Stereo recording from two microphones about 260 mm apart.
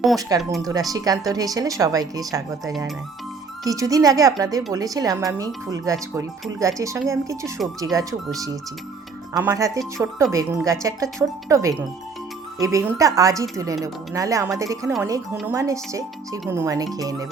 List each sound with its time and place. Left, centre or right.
0.2 s speech: centre
9.3 s speech: centre